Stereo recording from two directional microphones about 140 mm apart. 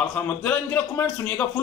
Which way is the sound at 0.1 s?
10° left (ahead or behind).